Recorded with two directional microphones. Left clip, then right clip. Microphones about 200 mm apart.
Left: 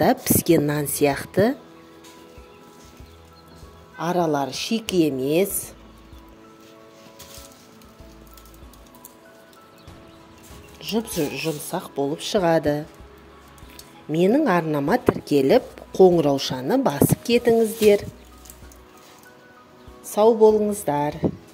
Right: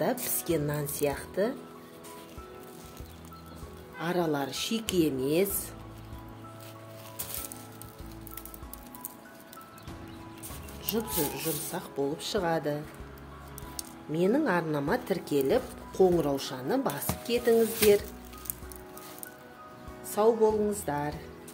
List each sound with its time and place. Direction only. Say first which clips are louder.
0.0 s a woman's voice: left 11 dB; 45° left (ahead or behind)
4.0 s speech: left 8 dB; 30° left (ahead or behind)
10.8 s speech: left 7 dB; 30° left (ahead or behind)
14.1 s speech: left 8 dB; 40° left (ahead or behind)
20.2 s speech: left 9 dB; 35° left (ahead or behind)